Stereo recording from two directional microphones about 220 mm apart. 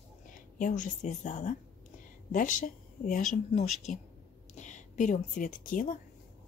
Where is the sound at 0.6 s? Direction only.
35° left (ahead or behind).